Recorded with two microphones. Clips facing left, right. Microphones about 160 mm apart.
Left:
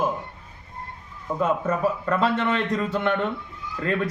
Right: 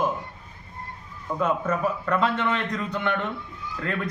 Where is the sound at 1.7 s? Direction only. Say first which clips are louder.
Left 2 dB; 30° left (ahead or behind).